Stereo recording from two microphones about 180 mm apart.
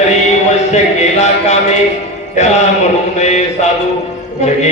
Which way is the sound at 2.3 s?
40° left (ahead or behind).